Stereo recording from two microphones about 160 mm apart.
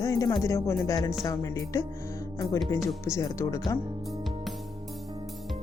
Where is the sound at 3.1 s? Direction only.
20° left (ahead or behind).